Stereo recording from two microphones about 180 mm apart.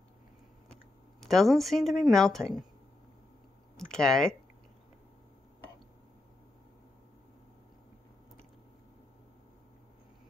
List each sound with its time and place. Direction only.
1.2 s speech: centre (ahead or behind)
3.7 s speech: 5° left (ahead or behind)